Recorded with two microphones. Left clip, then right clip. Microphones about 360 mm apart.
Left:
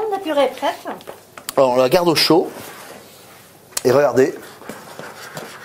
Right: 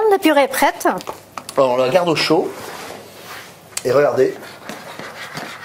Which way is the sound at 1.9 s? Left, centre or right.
Left.